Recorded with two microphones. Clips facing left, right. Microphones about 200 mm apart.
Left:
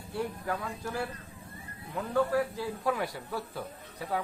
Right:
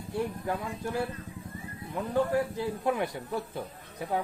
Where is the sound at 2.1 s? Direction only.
20° right (ahead or behind).